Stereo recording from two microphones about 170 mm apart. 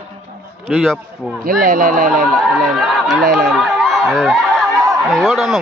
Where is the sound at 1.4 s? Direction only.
55° right (ahead or behind).